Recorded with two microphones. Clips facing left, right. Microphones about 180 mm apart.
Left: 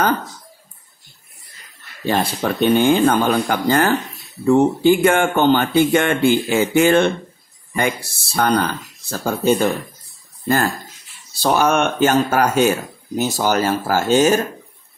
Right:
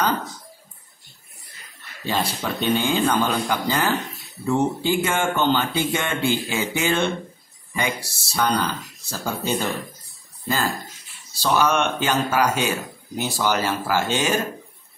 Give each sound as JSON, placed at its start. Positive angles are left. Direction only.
{"t": 2.0, "sound": "speech", "side_deg": 55}
{"t": 11.4, "sound": "speech", "side_deg": 50}